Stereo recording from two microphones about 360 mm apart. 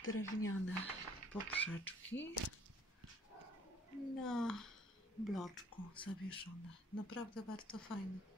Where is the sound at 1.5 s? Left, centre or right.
Centre.